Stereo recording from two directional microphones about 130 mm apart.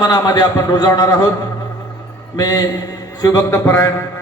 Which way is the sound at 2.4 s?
30° left (ahead or behind).